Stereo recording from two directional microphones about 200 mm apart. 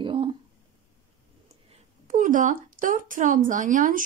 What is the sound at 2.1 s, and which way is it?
A woman's voice, 40° right (ahead or behind).